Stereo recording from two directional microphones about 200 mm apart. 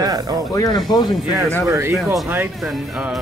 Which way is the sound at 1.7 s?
15° right (ahead or behind).